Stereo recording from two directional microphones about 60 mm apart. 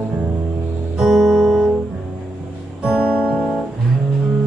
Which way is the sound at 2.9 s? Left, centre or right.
Centre.